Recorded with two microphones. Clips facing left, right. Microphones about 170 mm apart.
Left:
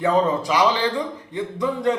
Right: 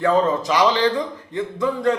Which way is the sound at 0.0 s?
15° left (ahead or behind).